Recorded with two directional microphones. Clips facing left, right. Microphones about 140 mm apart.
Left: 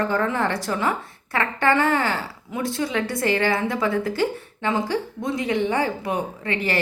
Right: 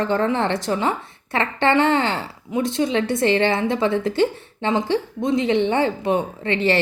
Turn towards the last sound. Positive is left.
turn(degrees=-25)  # may be behind; listen again after turning